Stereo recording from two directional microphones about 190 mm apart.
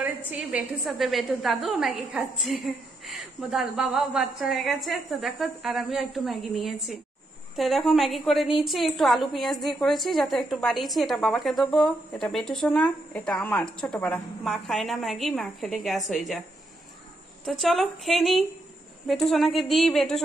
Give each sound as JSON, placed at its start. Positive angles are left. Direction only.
{"t": 0.3, "sound": "a woman's voice", "side_deg": -5}
{"t": 17.5, "sound": "a woman's voice", "side_deg": 0}